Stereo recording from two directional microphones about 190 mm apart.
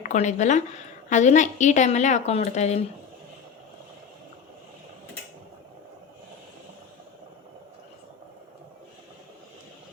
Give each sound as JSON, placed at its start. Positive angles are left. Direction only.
{"t": 0.0, "sound": "a woman's voice", "side_deg": 40}